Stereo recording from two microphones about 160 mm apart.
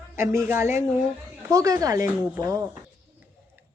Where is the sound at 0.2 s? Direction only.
15° right (ahead or behind).